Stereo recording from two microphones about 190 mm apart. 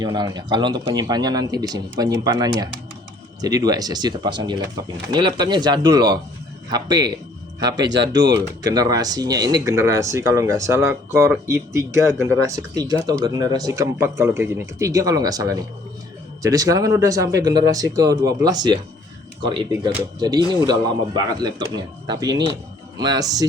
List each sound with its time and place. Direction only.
0.0 s speech: 20° right (ahead or behind)
7.8 s speech: 65° right (ahead or behind)
8.4 s speech: 20° right (ahead or behind)
20.1 s speech: 20° right (ahead or behind)